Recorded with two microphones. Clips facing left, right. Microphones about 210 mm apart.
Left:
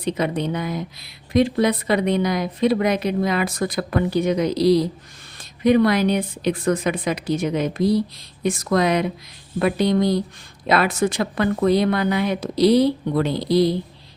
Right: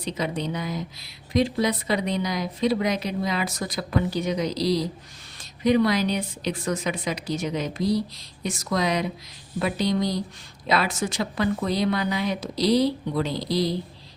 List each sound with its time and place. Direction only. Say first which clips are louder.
0.0 s a woman's voice: left 5 dB; 55° left (ahead or behind)